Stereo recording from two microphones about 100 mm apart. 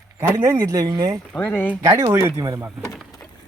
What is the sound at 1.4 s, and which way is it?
Speech, 15° left (ahead or behind).